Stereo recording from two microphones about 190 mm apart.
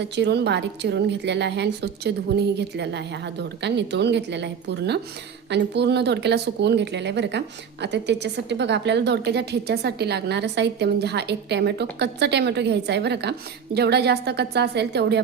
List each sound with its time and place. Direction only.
0.0 s speech: 65° right (ahead or behind)